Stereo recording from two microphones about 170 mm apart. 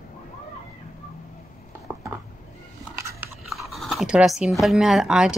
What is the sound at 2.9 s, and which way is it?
Biting, 15° right (ahead or behind).